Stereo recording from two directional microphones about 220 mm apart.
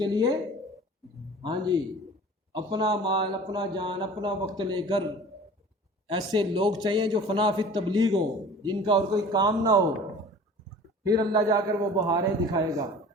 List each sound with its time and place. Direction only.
0.0 s a man's voice: 20° right (ahead or behind)
1.4 s a man's voice: 20° right (ahead or behind)
11.0 s a man's voice: 15° right (ahead or behind)